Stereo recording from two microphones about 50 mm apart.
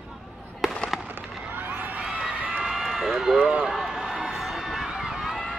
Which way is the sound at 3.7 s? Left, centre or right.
Centre.